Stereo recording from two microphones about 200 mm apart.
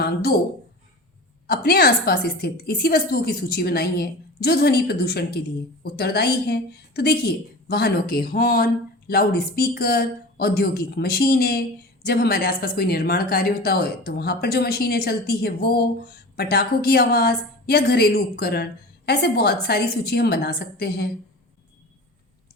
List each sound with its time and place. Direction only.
0.0 s speech: 50° left (ahead or behind)
1.5 s a woman's voice: 50° left (ahead or behind)